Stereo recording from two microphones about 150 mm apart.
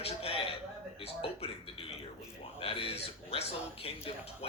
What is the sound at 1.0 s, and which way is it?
Speech, 40° left (ahead or behind).